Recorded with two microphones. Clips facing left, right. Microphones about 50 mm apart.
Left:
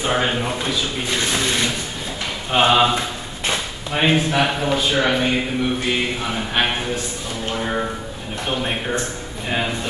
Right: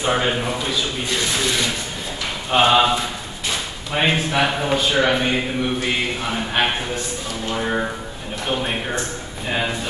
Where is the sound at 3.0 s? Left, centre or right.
Left.